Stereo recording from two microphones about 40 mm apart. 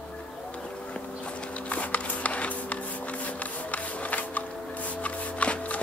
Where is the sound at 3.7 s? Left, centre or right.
Left.